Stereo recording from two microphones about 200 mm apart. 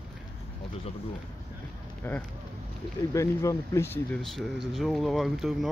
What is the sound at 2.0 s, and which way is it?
Speech, 10° left (ahead or behind).